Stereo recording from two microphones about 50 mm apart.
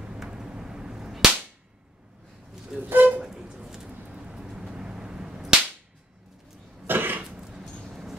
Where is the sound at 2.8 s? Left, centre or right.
Right.